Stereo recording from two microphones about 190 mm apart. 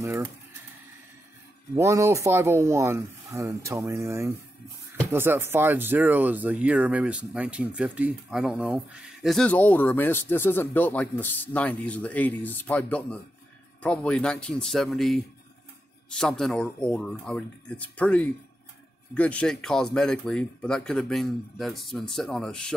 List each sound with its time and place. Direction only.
1.8 s speech: 15° right (ahead or behind); by 22.7 s 5° left (ahead or behind)